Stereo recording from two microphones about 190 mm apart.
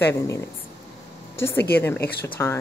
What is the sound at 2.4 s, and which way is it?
Speech, 10° left (ahead or behind).